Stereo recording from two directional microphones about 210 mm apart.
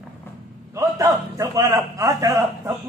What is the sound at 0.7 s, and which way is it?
A man's voice, 15° right (ahead or behind).